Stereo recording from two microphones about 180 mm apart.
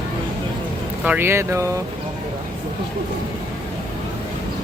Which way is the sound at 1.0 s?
10° right (ahead or behind).